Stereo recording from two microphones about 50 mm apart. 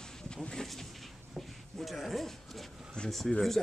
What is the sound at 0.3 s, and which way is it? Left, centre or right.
Vehicle, centre.